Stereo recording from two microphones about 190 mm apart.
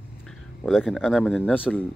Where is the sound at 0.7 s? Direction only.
Centre (ahead or behind).